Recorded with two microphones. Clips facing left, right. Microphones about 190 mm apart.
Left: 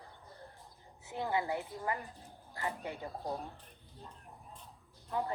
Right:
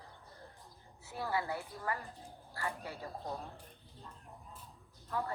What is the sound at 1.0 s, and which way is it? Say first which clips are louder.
Speech: left 2 dB; 20° left (ahead or behind).